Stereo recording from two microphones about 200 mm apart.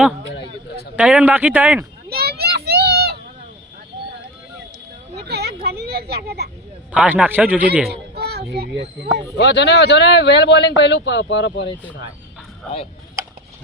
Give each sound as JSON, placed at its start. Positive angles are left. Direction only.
{"t": 0.9, "sound": "a man's voice", "side_deg": -5}
{"t": 2.0, "sound": "children playing", "side_deg": -50}
{"t": 5.1, "sound": "a sound", "side_deg": -55}
{"t": 6.9, "sound": "a man's voice", "side_deg": -5}
{"t": 7.9, "sound": "speech", "side_deg": -55}
{"t": 9.4, "sound": "a man's voice", "side_deg": 60}